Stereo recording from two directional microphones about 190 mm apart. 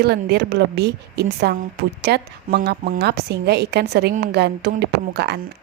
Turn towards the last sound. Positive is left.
turn(degrees=-60)  # may be behind; listen again after turning